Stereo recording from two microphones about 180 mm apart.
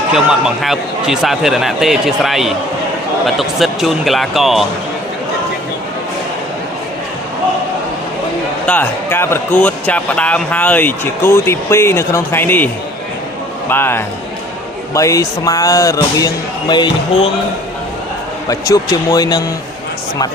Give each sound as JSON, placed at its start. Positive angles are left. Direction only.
{"t": 0.1, "sound": "a man's voice", "side_deg": -5}
{"t": 8.6, "sound": "speech", "side_deg": 10}
{"t": 18.4, "sound": "speech", "side_deg": 20}